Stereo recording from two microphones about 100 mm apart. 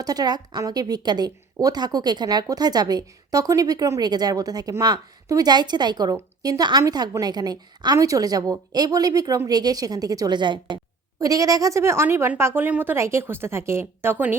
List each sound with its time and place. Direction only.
0.0 s a woman's voice: 40° right (ahead or behind)
11.2 s a woman's voice: 35° right (ahead or behind)